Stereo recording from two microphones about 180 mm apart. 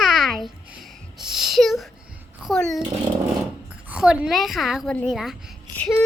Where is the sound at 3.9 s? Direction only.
5° right (ahead or behind).